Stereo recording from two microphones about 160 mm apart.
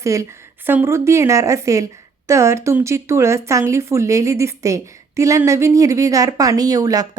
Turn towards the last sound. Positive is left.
turn(degrees=-25)  # may be behind; listen again after turning